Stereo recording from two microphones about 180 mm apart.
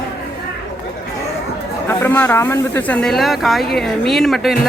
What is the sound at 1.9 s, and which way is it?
Speech, 10° left (ahead or behind).